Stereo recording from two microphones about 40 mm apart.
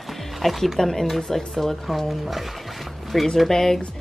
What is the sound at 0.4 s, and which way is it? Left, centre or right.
Speech, centre.